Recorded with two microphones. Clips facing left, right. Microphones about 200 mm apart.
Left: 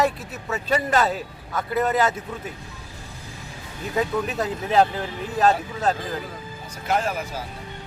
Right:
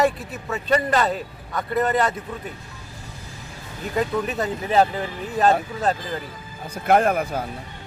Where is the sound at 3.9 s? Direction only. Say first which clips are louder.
Right 1 dB; centre (ahead or behind).